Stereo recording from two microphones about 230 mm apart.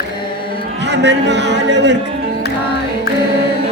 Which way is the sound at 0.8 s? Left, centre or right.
Right.